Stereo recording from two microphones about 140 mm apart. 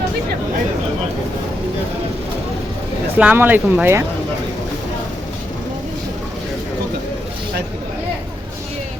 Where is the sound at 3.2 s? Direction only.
10° right (ahead or behind).